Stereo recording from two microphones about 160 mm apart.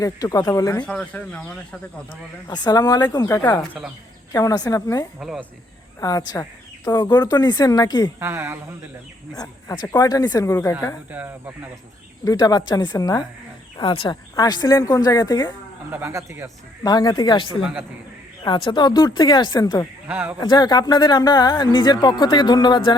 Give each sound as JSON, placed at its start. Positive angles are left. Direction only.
{"t": 0.0, "sound": "speech", "side_deg": 20}
{"t": 0.9, "sound": "speech", "side_deg": 5}
{"t": 2.5, "sound": "speech", "side_deg": 25}
{"t": 5.2, "sound": "speech", "side_deg": 0}
{"t": 6.0, "sound": "speech", "side_deg": 20}
{"t": 8.2, "sound": "speech", "side_deg": -15}
{"t": 9.4, "sound": "speech", "side_deg": 25}
{"t": 11.1, "sound": "speech", "side_deg": -10}
{"t": 12.2, "sound": "speech", "side_deg": 25}
{"t": 15.9, "sound": "speech", "side_deg": -15}
{"t": 16.8, "sound": "speech", "side_deg": 25}
{"t": 20.1, "sound": "speech", "side_deg": -10}
{"t": 20.4, "sound": "speech", "side_deg": 25}